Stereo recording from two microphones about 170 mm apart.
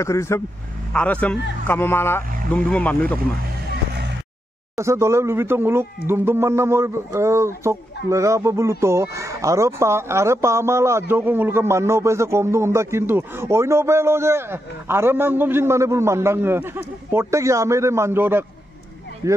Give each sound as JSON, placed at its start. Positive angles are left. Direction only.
{"t": 0.0, "sound": "speech", "side_deg": 15}
{"t": 4.7, "sound": "speech", "side_deg": -15}